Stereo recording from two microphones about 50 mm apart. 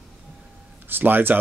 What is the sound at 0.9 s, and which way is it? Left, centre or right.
Speech, right.